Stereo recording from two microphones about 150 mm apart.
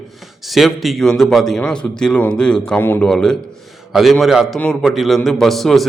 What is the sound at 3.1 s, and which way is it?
A man's voice, 5° left (ahead or behind).